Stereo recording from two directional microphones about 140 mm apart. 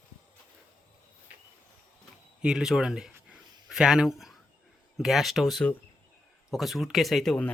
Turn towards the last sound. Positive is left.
turn(degrees=5)  # may be behind; listen again after turning